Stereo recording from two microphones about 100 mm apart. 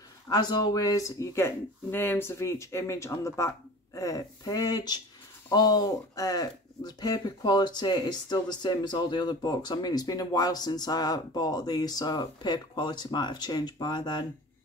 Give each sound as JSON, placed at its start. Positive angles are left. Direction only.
{"t": 0.3, "sound": "speech", "side_deg": 45}